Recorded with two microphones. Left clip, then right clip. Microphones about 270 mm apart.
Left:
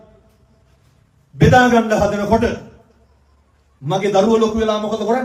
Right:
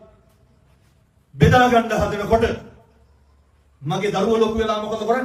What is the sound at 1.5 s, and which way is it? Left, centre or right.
A man's voice, centre.